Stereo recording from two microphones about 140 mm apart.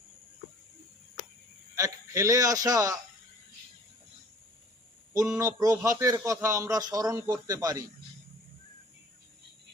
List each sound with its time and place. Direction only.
1.7 s a man's voice: 20° right (ahead or behind)
5.4 s a man's voice: 25° right (ahead or behind)